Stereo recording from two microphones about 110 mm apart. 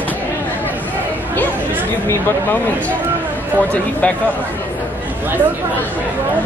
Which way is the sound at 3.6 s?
15° left (ahead or behind).